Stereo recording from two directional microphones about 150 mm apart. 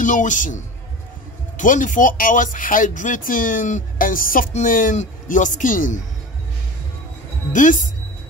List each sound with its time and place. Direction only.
0.0 s speech: 60° left (ahead or behind)
1.6 s speech: 60° left (ahead or behind)
7.5 s speech: 60° left (ahead or behind)